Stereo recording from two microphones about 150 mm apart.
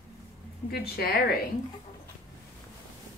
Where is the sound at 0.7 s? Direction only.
90° left.